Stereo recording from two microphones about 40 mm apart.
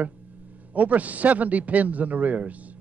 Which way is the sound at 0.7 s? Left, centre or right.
Right.